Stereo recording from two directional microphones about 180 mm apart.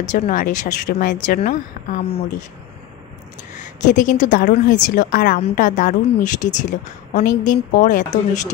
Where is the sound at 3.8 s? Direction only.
45° left (ahead or behind).